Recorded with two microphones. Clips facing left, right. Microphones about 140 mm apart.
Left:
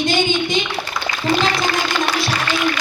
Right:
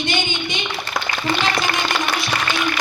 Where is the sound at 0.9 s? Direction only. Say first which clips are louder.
Right 4 dB; 45° right (ahead or behind).